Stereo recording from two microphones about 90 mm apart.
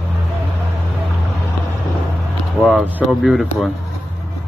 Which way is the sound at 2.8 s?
15° right (ahead or behind).